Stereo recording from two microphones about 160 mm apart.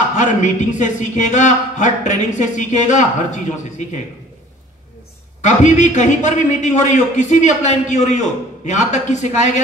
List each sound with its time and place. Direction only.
0.1 s a man's voice: 50° left (ahead or behind)
5.4 s a man's voice: 50° left (ahead or behind)